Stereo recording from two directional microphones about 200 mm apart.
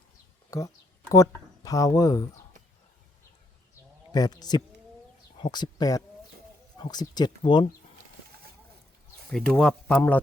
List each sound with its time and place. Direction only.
0.5 s speech: 15° left (ahead or behind)
4.1 s speech: 20° left (ahead or behind)
9.3 s speech: 5° left (ahead or behind)